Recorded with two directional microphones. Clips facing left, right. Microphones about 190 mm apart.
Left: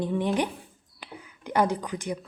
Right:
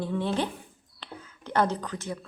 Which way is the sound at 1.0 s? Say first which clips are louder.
Left 1 dB; 15° left (ahead or behind).